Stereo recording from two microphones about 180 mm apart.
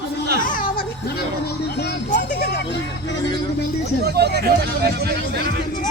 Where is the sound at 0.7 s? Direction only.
65° left (ahead or behind).